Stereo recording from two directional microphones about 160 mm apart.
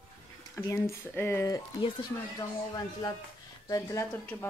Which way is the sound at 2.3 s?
25° left (ahead or behind).